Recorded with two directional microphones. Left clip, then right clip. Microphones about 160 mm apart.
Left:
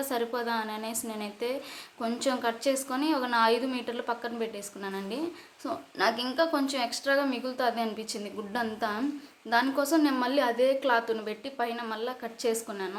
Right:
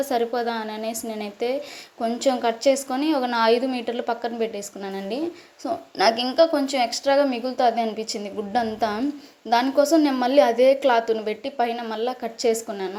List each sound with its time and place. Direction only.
0.0 s a woman's voice: 20° right (ahead or behind)